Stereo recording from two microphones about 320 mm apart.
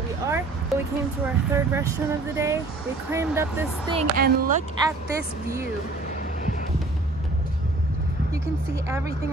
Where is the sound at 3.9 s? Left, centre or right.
Right.